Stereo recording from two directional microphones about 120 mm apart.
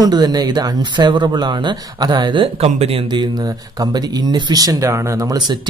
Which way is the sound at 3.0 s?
35° right (ahead or behind).